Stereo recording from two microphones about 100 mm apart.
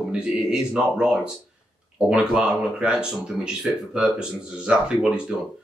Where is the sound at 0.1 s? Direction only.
5° right (ahead or behind).